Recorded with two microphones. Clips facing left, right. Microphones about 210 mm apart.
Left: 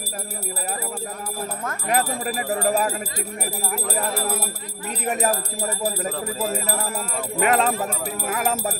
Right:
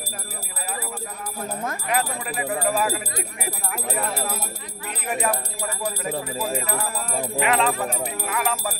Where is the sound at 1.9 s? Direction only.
40° left (ahead or behind).